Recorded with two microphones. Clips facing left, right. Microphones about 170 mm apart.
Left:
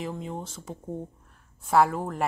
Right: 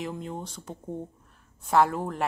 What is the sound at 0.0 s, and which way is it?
Speech, centre (ahead or behind).